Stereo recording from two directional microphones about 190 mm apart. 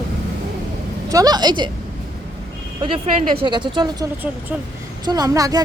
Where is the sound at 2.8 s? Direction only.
30° right (ahead or behind).